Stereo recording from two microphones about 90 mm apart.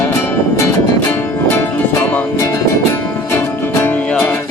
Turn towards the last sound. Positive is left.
turn(degrees=25)  # may be behind; listen again after turning